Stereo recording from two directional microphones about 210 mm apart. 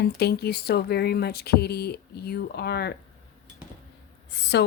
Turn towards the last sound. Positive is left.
turn(degrees=55)  # may be behind; listen again after turning